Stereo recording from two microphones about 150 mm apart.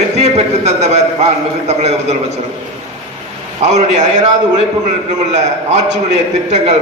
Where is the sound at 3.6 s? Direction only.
50° right (ahead or behind).